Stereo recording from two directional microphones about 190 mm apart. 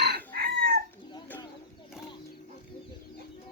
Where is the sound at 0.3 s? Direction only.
55° right (ahead or behind).